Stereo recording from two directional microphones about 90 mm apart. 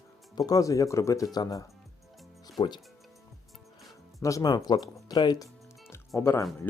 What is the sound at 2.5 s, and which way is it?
Speech, 55° left (ahead or behind).